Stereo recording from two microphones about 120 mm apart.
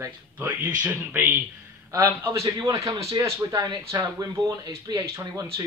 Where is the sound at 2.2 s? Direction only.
25° right (ahead or behind).